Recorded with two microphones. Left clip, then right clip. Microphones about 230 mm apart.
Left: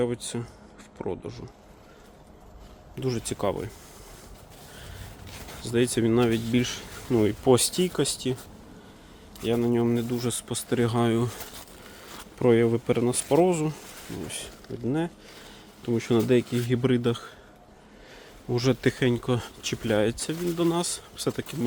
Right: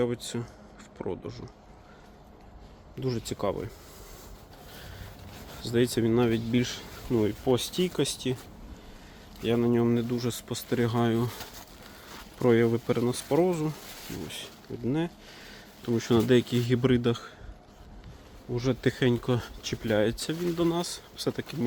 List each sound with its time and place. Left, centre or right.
0.0 s speech: centre
2.9 s speech: centre
5.6 s speech: centre; by 7.8 s left
7.8 s speech: centre
9.4 s speech: centre
12.4 s speech: centre
18.5 s speech: left
18.8 s speech: centre